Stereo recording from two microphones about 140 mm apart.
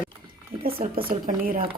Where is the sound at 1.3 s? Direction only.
90° right.